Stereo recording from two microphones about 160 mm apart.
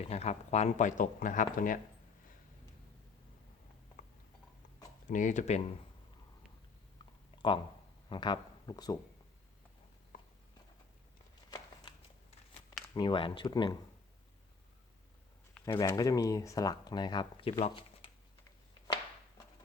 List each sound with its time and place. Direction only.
0.1 s speech: 40° left (ahead or behind)
5.0 s speech: 50° left (ahead or behind)
7.0 s a sound: 30° left (ahead or behind)
8.1 s speech: 30° left (ahead or behind)
11.5 s a sound: 25° left (ahead or behind)
12.9 s speech: 30° left (ahead or behind)
15.6 s speech: 25° left (ahead or behind)